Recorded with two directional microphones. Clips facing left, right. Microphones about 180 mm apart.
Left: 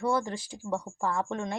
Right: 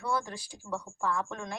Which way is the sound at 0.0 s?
25° left (ahead or behind).